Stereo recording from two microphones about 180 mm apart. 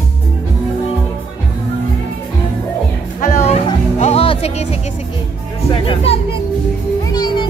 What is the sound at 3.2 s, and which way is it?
Music, 35° left (ahead or behind).